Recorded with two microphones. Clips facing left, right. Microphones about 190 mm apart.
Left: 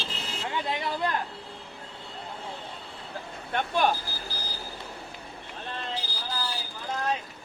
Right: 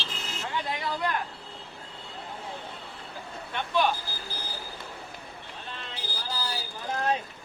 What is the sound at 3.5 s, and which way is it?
Vehicle, 50° left (ahead or behind).